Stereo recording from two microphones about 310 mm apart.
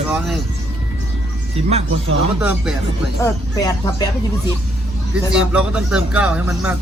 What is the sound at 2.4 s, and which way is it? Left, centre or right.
Speech, centre.